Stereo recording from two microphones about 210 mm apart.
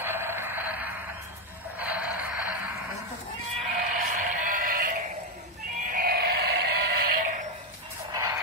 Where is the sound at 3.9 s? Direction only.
40° right (ahead or behind).